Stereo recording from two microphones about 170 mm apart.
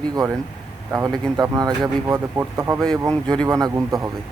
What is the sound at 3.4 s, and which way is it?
Speech, 20° right (ahead or behind).